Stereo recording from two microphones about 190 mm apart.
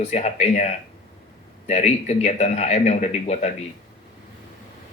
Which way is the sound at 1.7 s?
35° left (ahead or behind).